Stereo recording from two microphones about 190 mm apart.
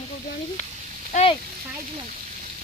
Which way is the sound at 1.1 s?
30° left (ahead or behind).